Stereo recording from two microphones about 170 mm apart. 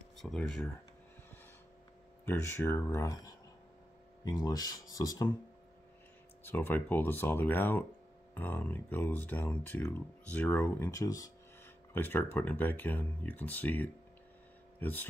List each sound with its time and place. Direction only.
0.2 s speech: 5° left (ahead or behind)
2.2 s speech: 15° left (ahead or behind)
6.4 s speech: 10° left (ahead or behind)
10.9 s speech: 20° left (ahead or behind)